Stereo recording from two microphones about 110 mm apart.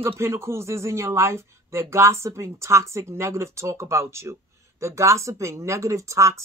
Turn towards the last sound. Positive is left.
turn(degrees=-25)  # may be behind; listen again after turning